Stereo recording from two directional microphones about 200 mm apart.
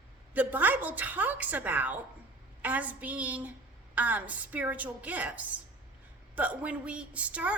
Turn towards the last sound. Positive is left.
turn(degrees=-5)  # may be behind; listen again after turning